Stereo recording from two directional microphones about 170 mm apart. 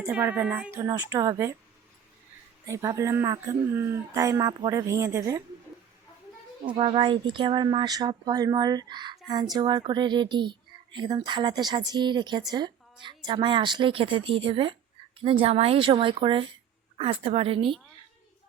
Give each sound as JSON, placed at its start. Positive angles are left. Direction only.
{"t": 0.1, "sound": "speech", "side_deg": -10}
{"t": 2.6, "sound": "speech", "side_deg": -20}
{"t": 6.7, "sound": "speech", "side_deg": -30}